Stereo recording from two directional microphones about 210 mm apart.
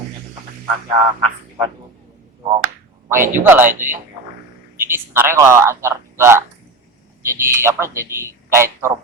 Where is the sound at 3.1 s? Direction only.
10° right (ahead or behind).